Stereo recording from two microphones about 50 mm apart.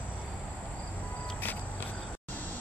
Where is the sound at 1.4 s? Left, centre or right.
Left.